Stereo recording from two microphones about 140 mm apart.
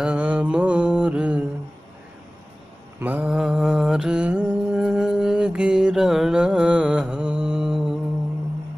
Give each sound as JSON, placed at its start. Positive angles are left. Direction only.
{"t": 0.0, "sound": "mantra", "side_deg": -10}
{"t": 3.0, "sound": "mantra", "side_deg": -10}